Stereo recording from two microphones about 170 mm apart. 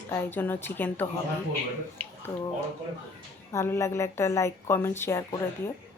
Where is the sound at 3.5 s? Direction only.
15° left (ahead or behind).